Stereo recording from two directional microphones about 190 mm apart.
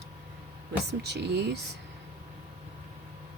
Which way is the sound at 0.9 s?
60° right (ahead or behind).